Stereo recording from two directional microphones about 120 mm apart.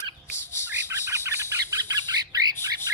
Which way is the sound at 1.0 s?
25° right (ahead or behind).